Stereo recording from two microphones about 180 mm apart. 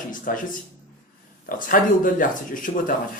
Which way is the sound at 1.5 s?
50° left (ahead or behind).